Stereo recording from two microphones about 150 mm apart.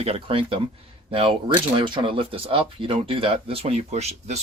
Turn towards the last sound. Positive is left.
turn(degrees=-45)  # may be behind; listen again after turning